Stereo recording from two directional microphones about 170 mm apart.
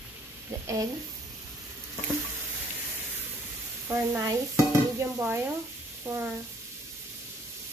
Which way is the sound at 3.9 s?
15° right (ahead or behind).